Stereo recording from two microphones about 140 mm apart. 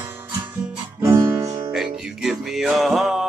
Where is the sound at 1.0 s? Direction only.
20° right (ahead or behind).